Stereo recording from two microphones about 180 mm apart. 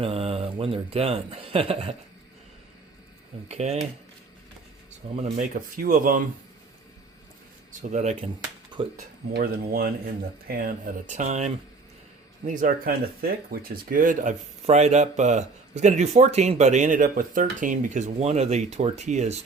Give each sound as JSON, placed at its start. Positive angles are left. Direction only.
{"t": 0.0, "sound": "a man's voice", "side_deg": -35}
{"t": 3.5, "sound": "speech", "side_deg": -35}
{"t": 5.1, "sound": "speech", "side_deg": -45}
{"t": 7.7, "sound": "speech", "side_deg": -45}
{"t": 9.3, "sound": "speech", "side_deg": -55}